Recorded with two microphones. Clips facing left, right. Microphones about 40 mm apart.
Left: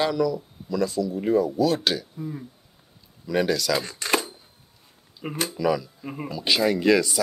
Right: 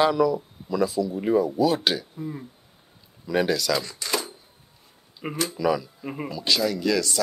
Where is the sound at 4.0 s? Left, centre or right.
Left.